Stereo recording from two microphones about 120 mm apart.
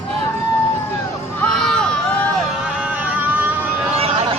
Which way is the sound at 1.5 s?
5° left (ahead or behind).